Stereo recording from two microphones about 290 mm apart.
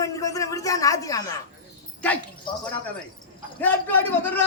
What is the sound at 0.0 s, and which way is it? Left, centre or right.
A man's voice, centre.